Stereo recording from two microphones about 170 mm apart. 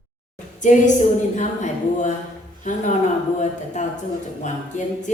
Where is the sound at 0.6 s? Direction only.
45° left (ahead or behind).